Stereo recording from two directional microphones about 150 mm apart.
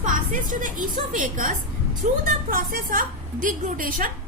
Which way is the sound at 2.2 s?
70° right (ahead or behind).